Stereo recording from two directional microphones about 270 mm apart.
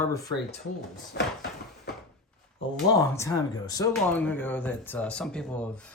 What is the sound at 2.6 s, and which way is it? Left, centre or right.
Speech, left.